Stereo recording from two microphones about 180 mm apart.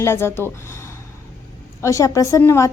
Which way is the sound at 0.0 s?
15° left (ahead or behind).